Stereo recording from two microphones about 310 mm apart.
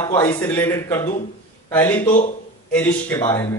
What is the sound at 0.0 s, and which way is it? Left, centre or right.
A man's voice, centre.